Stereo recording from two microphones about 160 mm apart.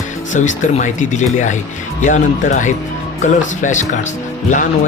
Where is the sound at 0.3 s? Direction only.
50° left (ahead or behind).